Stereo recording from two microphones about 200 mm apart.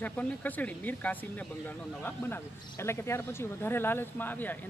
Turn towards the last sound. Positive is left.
turn(degrees=10)  # may be behind; listen again after turning